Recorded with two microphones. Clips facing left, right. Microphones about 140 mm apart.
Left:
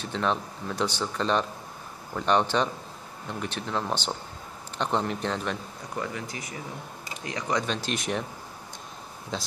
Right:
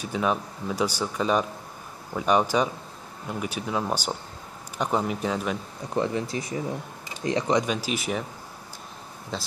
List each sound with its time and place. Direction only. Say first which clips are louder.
0.0 s speech: right 2 dB; 10° right (ahead or behind)
5.9 s speech: right 8 dB; 30° right (ahead or behind)
7.6 s speech: right 2 dB; 10° right (ahead or behind)
9.3 s speech: even; centre (ahead or behind)